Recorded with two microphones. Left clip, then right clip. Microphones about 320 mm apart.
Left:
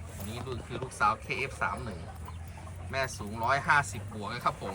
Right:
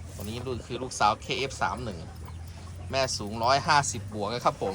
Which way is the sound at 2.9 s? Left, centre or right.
Centre.